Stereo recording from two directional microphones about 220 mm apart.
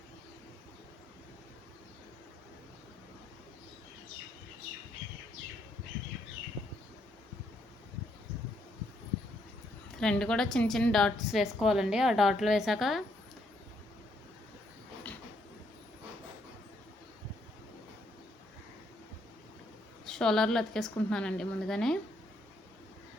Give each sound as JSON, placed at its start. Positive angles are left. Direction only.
{"t": 10.0, "sound": "a woman's voice", "side_deg": 5}
{"t": 20.1, "sound": "a woman's voice", "side_deg": 5}